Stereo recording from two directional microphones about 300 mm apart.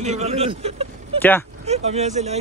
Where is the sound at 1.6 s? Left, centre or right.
Right.